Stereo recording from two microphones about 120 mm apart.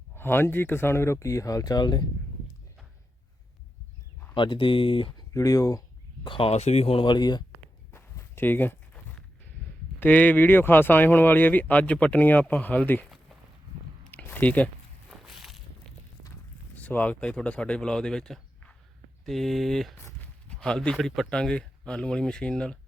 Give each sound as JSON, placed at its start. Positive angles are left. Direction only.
{"t": 0.2, "sound": "speech", "side_deg": 20}
{"t": 4.4, "sound": "speech", "side_deg": 45}
{"t": 5.3, "sound": "speech", "side_deg": 30}
{"t": 6.2, "sound": "speech", "side_deg": 45}
{"t": 6.5, "sound": "speech", "side_deg": 65}
{"t": 7.9, "sound": "walk", "side_deg": 20}
{"t": 10.0, "sound": "speech", "side_deg": 15}
{"t": 14.1, "sound": "speech", "side_deg": 15}
{"t": 15.2, "sound": "walk", "side_deg": 0}
{"t": 16.7, "sound": "speech", "side_deg": 15}
{"t": 20.0, "sound": "walk", "side_deg": 20}
{"t": 20.5, "sound": "speech", "side_deg": 5}